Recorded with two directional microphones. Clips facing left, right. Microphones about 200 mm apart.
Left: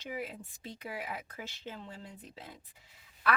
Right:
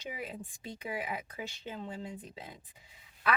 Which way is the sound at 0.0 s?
15° right (ahead or behind).